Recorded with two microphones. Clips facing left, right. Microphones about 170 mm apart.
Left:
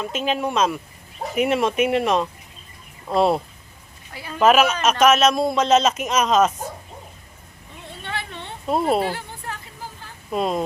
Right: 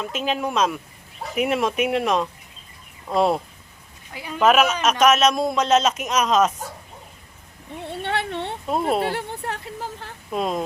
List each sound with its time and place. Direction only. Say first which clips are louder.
0.0 s speech: left 1 dB; centre (ahead or behind)
4.1 s speech: right 2 dB; 15° right (ahead or behind)
4.4 s speech: left 1 dB; centre (ahead or behind)
8.0 s a sound: right 6 dB; 65° right (ahead or behind)
8.6 s speech: left 3 dB; centre (ahead or behind)
9.1 s a sound: right 5 dB; 65° right (ahead or behind)
10.3 s speech: left 2 dB; centre (ahead or behind)